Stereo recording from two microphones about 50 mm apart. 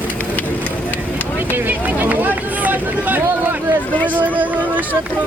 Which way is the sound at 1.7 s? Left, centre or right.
Right.